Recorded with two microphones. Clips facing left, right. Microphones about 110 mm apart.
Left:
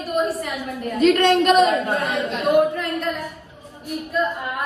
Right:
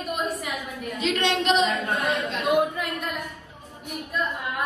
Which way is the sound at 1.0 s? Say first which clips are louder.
Left 9 dB; 50° left (ahead or behind).